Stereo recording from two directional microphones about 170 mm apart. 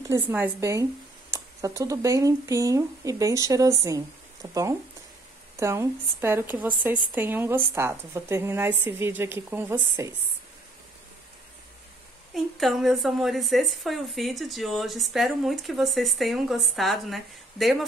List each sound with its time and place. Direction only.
0.1 s a woman's voice: 10° right (ahead or behind)
12.4 s a woman's voice: centre (ahead or behind)